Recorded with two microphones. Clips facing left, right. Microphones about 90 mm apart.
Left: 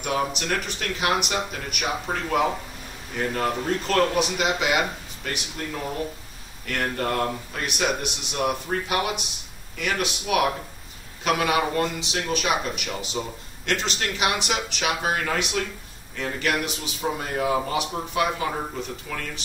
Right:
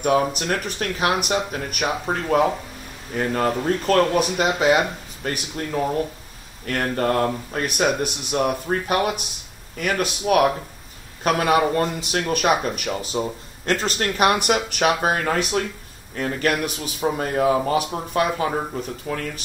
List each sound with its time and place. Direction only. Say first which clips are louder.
0.0 s speech: right 6 dB; 45° right (ahead or behind)
12.0 s speech: right 4 dB; 50° right (ahead or behind)